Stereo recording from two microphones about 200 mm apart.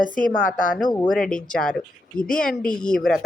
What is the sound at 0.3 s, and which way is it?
Speech, 45° left (ahead or behind).